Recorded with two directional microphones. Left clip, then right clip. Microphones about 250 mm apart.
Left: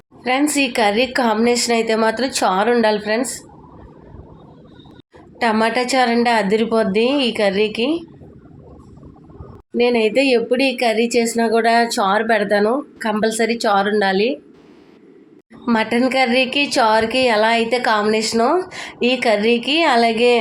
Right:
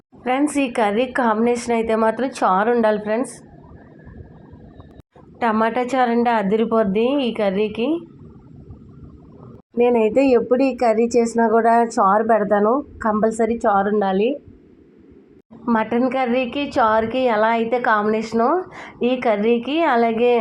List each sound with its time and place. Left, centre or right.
0.3 s a woman's voice: centre
5.4 s a woman's voice: centre
9.7 s a woman's voice: centre
15.6 s a woman's voice: centre